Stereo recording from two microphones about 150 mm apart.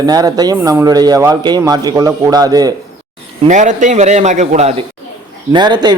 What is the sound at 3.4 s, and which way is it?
A man's voice, 55° right (ahead or behind).